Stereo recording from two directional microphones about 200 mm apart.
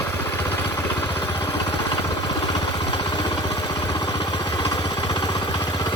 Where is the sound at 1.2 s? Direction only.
25° left (ahead or behind).